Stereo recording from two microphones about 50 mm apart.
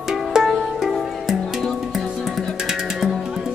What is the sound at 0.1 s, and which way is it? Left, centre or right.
Music, centre.